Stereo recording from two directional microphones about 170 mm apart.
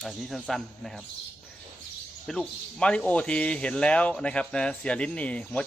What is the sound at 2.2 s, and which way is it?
Speech, 5° left (ahead or behind).